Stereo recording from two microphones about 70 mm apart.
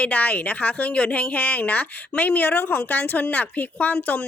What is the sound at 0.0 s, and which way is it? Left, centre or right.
A woman's voice, left.